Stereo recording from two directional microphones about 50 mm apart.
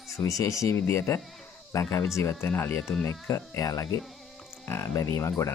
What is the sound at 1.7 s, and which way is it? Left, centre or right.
Speech, left.